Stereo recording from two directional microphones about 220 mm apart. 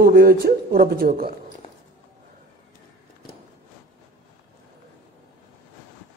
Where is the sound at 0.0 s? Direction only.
45° right (ahead or behind).